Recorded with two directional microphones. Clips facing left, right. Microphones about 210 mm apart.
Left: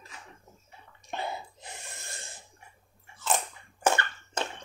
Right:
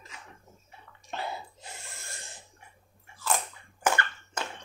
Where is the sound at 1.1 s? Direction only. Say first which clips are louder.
Left 1 dB; 20° left (ahead or behind).